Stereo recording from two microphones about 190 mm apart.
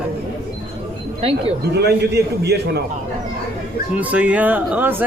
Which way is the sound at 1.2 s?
30° right (ahead or behind).